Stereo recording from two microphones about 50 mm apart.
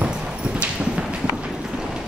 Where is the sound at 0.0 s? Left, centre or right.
Centre.